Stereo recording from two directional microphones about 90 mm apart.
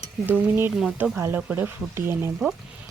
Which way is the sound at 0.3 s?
25° right (ahead or behind).